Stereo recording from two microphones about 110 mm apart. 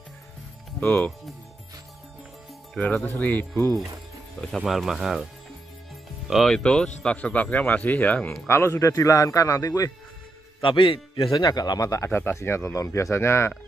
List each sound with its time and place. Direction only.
0.7 s speech: 15° left (ahead or behind)
2.7 s speech: 5° left (ahead or behind)
4.4 s speech: centre (ahead or behind); by 9.9 s 30° left (ahead or behind)
10.6 s a man's voice: 50° left (ahead or behind)
11.2 s speech: 35° left (ahead or behind)